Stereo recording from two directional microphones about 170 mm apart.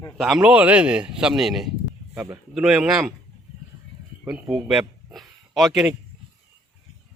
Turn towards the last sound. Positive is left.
turn(degrees=-5)  # may be behind; listen again after turning